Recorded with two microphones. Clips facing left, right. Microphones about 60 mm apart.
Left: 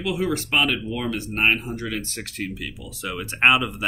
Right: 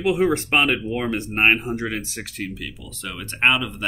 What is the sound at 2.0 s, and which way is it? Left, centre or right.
Speech, centre.